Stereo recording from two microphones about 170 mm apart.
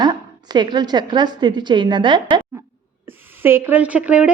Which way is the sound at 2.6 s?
15° right (ahead or behind).